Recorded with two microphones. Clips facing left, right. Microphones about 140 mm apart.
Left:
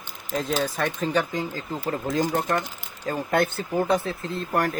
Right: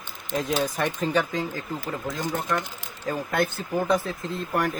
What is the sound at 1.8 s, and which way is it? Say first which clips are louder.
Speech: left 10 dB; 35° left (ahead or behind).